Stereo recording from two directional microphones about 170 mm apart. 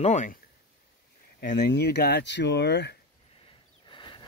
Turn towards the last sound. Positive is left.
turn(degrees=30)  # may be behind; listen again after turning